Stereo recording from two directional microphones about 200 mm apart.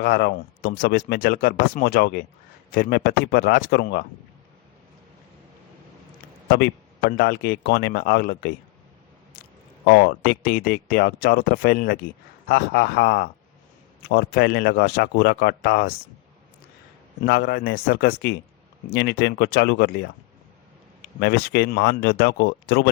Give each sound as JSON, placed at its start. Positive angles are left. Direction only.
{"t": 0.0, "sound": "speech", "side_deg": 55}
{"t": 7.2, "sound": "speech", "side_deg": 50}
{"t": 9.8, "sound": "speech", "side_deg": 60}
{"t": 17.2, "sound": "speech", "side_deg": 50}
{"t": 21.2, "sound": "speech", "side_deg": 50}